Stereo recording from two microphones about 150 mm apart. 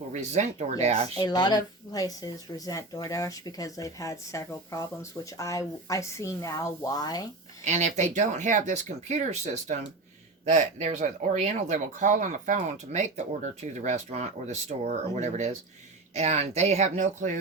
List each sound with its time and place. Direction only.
0.1 s speech: 50° right (ahead or behind)
1.1 s speech: 30° left (ahead or behind)
7.6 s speech: 50° right (ahead or behind)